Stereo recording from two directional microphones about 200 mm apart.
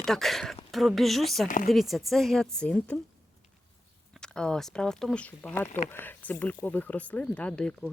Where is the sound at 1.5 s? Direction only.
45° left (ahead or behind).